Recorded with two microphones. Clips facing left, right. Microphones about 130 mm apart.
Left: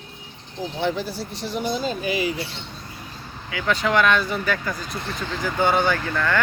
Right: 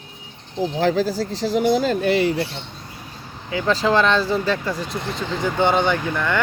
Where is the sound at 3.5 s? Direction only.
30° right (ahead or behind).